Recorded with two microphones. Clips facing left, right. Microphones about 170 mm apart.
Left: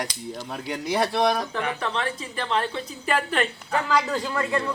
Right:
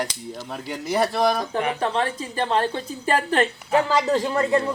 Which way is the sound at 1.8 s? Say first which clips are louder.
Right 4 dB; 35° right (ahead or behind).